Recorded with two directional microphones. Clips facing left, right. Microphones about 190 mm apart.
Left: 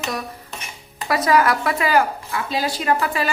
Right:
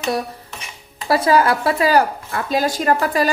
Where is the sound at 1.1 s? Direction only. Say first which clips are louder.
Right 2 dB; 30° right (ahead or behind).